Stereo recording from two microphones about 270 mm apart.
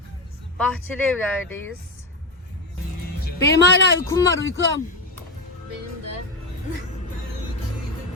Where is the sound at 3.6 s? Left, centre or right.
Left.